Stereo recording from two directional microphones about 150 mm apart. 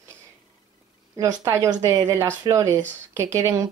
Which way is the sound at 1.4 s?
20° right (ahead or behind).